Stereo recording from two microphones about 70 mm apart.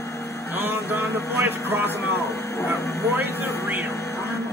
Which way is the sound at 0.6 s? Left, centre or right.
Right.